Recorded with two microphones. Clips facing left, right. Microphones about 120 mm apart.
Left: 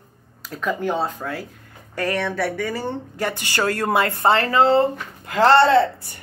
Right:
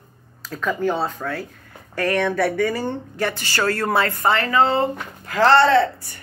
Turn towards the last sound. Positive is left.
turn(degrees=20)  # may be behind; listen again after turning